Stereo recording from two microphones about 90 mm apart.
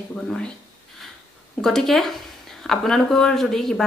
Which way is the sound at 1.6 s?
5° left (ahead or behind).